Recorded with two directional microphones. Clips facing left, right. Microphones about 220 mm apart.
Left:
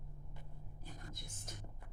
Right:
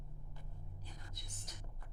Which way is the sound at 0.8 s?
50° left (ahead or behind).